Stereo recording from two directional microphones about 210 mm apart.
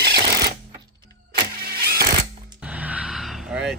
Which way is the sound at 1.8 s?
50° right (ahead or behind).